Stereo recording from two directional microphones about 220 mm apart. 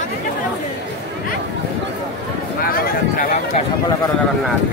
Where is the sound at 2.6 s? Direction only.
40° left (ahead or behind).